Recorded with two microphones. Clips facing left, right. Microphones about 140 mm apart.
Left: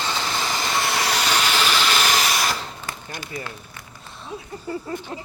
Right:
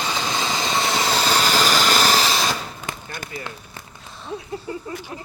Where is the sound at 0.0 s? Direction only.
15° right (ahead or behind).